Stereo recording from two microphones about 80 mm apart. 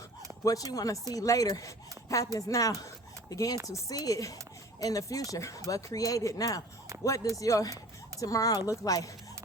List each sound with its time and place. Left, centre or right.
0.4 s speech: left
6.9 s a sound: right
7.3 s speech: left